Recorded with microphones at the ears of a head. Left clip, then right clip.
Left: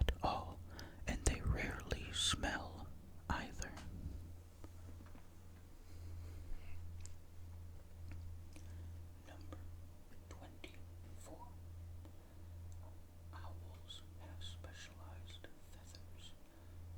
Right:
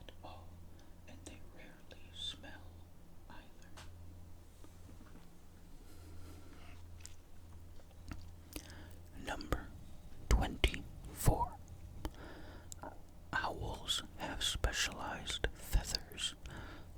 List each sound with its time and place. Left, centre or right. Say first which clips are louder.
0.0 s whispering: left 14 dB; left
8.1 s whispering: right 12 dB; right